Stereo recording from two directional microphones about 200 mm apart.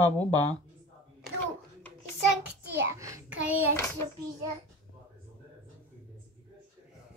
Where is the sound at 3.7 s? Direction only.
15° left (ahead or behind).